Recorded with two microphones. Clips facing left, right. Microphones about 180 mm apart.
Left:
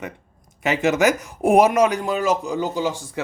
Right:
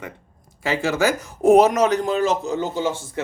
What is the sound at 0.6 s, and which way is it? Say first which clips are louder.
Speech: left 2 dB; 20° left (ahead or behind).